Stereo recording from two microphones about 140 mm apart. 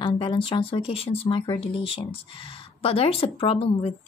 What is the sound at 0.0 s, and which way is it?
Speech, 40° left (ahead or behind).